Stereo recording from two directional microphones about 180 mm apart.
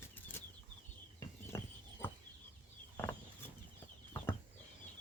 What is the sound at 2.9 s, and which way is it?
Chicken, 10° left (ahead or behind).